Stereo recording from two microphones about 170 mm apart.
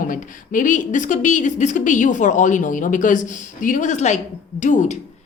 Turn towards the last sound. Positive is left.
turn(degrees=45)  # may be behind; listen again after turning